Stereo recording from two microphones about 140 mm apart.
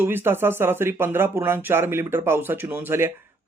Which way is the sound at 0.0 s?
15° right (ahead or behind).